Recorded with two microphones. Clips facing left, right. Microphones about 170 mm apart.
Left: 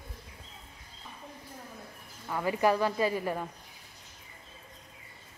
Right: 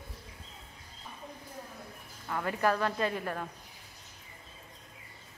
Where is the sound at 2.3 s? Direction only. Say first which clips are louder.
Left 3 dB; 5° left (ahead or behind).